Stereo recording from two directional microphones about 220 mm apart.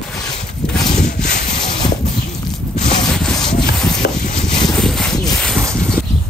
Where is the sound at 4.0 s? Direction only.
50° left (ahead or behind).